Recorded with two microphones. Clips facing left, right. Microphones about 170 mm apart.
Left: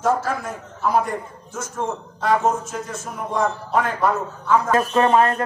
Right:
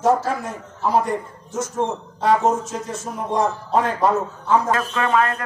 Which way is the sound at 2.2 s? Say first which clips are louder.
Right 2 dB; 35° right (ahead or behind).